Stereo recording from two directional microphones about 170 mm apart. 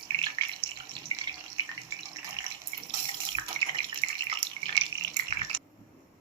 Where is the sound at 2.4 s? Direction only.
25° right (ahead or behind).